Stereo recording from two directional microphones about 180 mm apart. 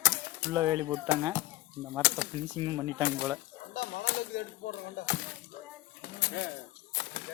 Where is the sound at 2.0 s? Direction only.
75° left (ahead or behind).